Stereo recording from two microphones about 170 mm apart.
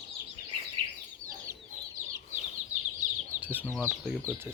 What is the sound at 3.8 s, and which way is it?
Speech, 10° right (ahead or behind).